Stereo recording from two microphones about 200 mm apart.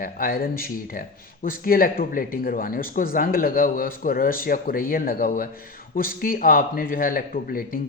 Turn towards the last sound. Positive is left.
turn(degrees=45)  # may be behind; listen again after turning